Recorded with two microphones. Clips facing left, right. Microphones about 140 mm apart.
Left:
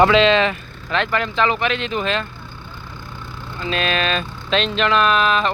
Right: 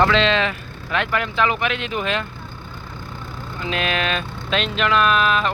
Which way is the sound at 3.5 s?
15° right (ahead or behind).